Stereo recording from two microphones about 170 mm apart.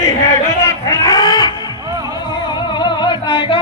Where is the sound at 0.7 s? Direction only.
20° left (ahead or behind).